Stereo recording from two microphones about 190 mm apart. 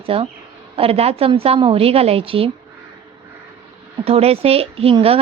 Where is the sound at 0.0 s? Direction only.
30° right (ahead or behind).